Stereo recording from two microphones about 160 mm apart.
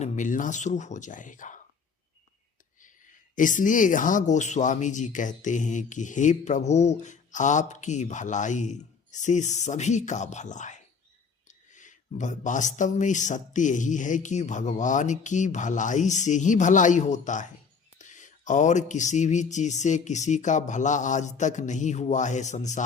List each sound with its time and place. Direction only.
0.0 s speech: 55° left (ahead or behind)
3.3 s speech: 55° left (ahead or behind)